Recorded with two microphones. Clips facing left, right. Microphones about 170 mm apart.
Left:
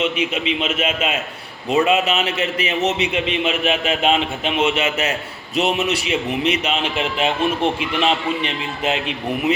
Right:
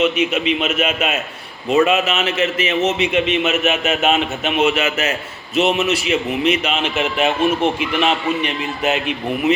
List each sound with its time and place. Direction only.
0.0 s a man's voice: 30° left (ahead or behind)